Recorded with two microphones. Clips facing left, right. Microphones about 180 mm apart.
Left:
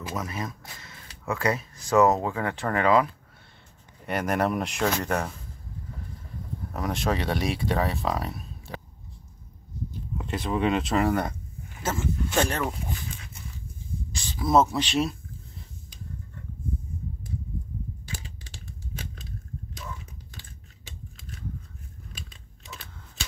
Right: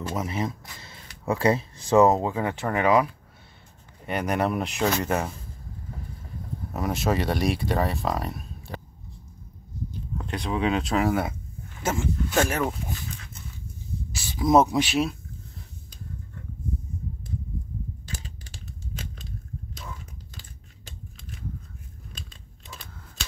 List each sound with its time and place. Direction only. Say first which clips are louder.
0.1 s speech: right 3 dB; 25° right (ahead or behind)
4.1 s speech: even; centre (ahead or behind)
6.7 s speech: right 2 dB; 5° right (ahead or behind)
10.1 s speech: left 1 dB; centre (ahead or behind)
14.1 s speech: right 2 dB; 10° right (ahead or behind)